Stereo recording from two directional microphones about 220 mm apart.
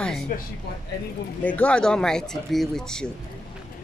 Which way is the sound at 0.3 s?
40° left (ahead or behind).